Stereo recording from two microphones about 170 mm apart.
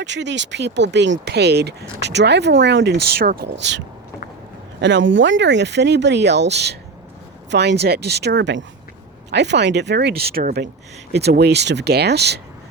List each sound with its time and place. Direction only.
0.0 s speech: 90° right